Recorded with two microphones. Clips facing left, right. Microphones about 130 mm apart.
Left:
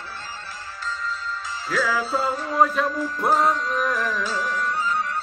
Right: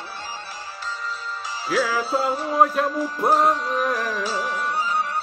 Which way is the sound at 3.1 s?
20° right (ahead or behind).